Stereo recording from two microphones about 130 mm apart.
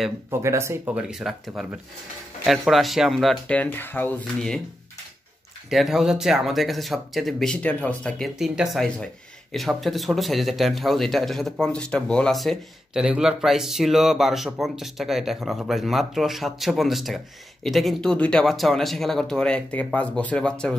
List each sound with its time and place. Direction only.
0.3 s speech: 20° right (ahead or behind)
0.9 s speech: 5° right (ahead or behind); by 4.1 s 15° left (ahead or behind)
5.7 s speech: centre (ahead or behind)